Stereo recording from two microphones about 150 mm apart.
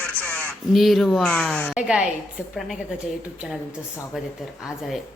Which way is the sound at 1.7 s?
5° right (ahead or behind).